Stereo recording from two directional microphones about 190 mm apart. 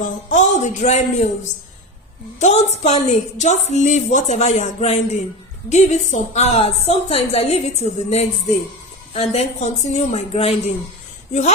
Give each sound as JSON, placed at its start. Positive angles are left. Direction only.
{"t": 0.0, "sound": "a woman's voice", "side_deg": 40}
{"t": 2.4, "sound": "a woman's voice", "side_deg": 35}